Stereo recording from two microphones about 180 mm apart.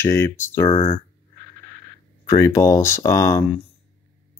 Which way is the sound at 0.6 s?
30° left (ahead or behind).